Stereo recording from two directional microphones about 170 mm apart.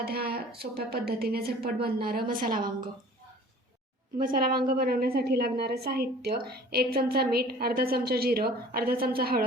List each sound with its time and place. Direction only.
0.0 s a woman's voice: 65° right (ahead or behind)
4.2 s a woman's voice: 60° right (ahead or behind)